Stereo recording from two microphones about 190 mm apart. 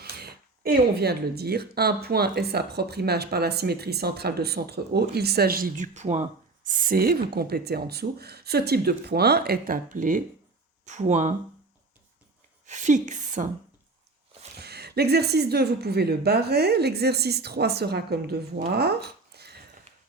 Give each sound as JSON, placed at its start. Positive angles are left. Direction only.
{"t": 0.0, "sound": "a woman's voice", "side_deg": -55}
{"t": 12.6, "sound": "a woman's voice", "side_deg": -40}
{"t": 14.5, "sound": "speech", "side_deg": -60}